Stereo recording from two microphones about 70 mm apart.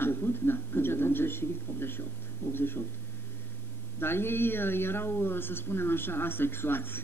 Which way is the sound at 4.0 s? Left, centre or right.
Left.